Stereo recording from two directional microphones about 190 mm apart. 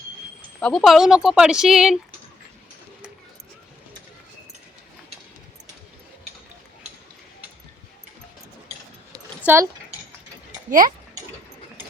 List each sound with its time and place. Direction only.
0.6 s speech: centre (ahead or behind)
9.4 s speech: 10° right (ahead or behind)
10.7 s speech: 45° right (ahead or behind)